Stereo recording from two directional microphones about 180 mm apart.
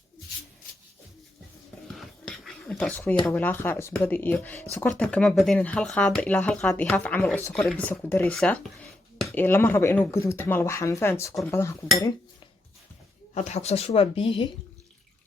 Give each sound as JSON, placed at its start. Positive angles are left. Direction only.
{"t": 2.0, "sound": "a sound", "side_deg": 0}
{"t": 3.2, "sound": "speech", "side_deg": 10}
{"t": 13.3, "sound": "speech", "side_deg": 40}